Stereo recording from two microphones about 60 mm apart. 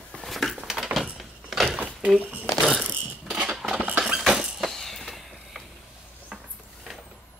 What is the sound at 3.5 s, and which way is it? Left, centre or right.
Cutlery, centre.